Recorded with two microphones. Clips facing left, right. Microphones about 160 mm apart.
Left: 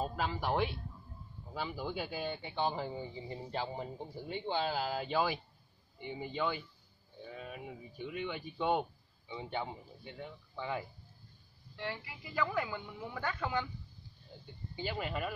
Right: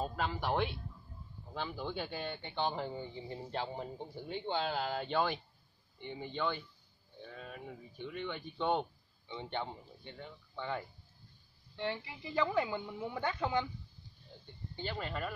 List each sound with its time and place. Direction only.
0.0 s speech: 5° left (ahead or behind)
11.7 s a woman's voice: 25° right (ahead or behind)
14.4 s speech: 5° left (ahead or behind)